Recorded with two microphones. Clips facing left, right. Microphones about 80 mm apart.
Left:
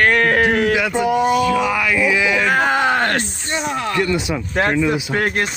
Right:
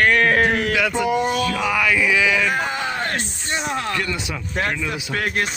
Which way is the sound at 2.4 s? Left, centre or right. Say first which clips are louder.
Left 6 dB; left.